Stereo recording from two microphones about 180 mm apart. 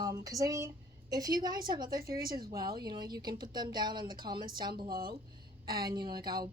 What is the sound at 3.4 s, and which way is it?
A woman's voice, 25° right (ahead or behind).